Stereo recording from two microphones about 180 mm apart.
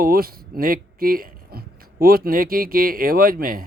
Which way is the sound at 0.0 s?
55° right (ahead or behind).